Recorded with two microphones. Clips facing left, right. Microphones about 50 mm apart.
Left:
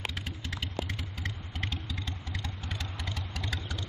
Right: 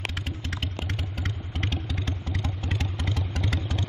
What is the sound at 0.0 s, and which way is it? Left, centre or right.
Vehicle, right.